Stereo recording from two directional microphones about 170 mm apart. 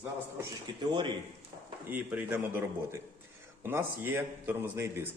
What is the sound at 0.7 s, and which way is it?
Speech, 25° right (ahead or behind).